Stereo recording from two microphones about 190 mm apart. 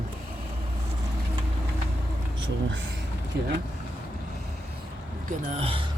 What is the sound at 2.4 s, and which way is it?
Speech, 80° right.